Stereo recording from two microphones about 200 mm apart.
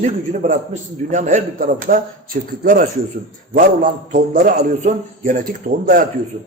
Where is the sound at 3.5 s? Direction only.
45° right (ahead or behind).